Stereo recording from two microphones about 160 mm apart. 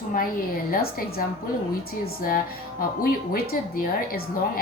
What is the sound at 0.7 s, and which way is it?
Speech, 70° left (ahead or behind).